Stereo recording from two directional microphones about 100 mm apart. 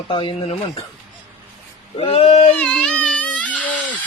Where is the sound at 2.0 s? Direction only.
75° left (ahead or behind).